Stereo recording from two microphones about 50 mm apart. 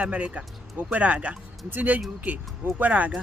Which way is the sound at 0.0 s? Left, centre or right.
Right.